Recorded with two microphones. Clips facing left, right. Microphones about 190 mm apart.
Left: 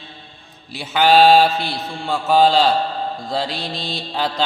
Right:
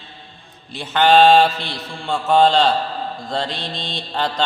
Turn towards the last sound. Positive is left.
turn(degrees=5)  # may be behind; listen again after turning